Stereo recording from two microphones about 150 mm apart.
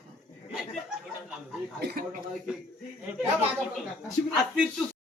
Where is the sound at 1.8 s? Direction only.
90° right.